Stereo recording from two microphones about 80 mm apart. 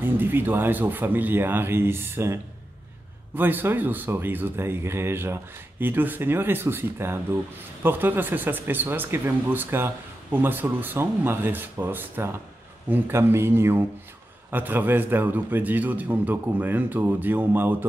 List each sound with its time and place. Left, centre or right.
0.0 s speech: right